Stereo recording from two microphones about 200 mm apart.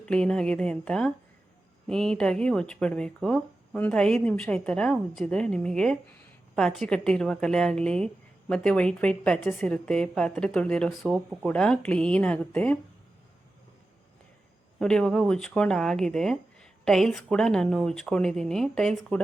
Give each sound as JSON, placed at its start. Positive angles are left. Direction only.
{"t": 0.0, "sound": "speech", "side_deg": 5}
{"t": 14.8, "sound": "speech", "side_deg": 5}